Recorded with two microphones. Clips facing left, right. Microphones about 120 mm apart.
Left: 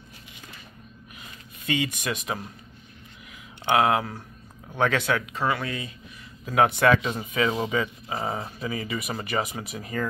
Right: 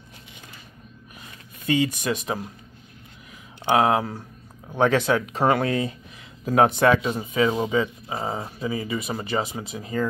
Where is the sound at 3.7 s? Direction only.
30° right (ahead or behind).